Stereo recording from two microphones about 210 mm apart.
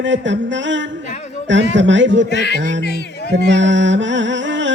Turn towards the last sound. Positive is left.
turn(degrees=-60)  # may be behind; listen again after turning